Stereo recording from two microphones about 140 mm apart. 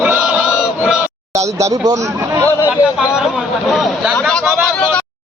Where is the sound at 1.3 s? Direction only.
20° right (ahead or behind).